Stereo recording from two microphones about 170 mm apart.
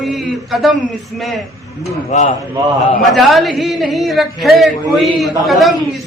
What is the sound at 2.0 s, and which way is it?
Speech, 45° left (ahead or behind).